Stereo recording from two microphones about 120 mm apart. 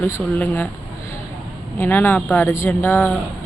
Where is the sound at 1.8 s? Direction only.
15° left (ahead or behind).